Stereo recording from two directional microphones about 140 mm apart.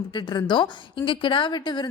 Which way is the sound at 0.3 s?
35° left (ahead or behind).